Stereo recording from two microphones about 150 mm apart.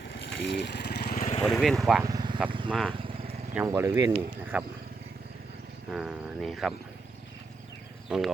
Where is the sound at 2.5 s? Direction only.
35° right (ahead or behind).